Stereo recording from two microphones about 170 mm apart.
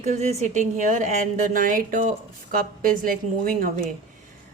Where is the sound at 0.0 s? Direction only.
45° right (ahead or behind).